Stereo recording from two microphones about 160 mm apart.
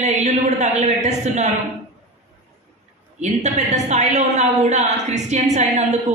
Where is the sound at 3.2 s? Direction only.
45° right (ahead or behind).